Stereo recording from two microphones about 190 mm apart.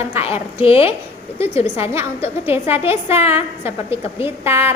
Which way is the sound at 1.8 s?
15° right (ahead or behind).